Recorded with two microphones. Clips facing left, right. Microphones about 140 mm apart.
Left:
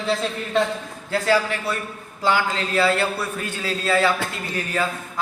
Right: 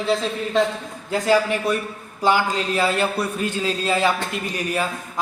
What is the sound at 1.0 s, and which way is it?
A man's voice, 15° right (ahead or behind).